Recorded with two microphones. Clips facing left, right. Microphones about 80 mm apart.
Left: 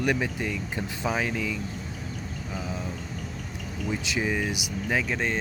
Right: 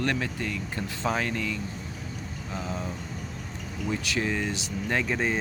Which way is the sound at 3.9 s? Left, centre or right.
Centre.